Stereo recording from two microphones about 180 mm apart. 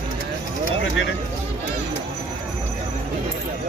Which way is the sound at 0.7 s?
90° left.